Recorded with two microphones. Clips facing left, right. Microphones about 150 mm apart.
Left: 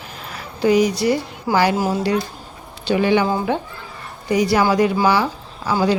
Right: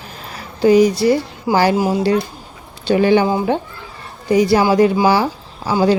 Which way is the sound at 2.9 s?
40° right (ahead or behind).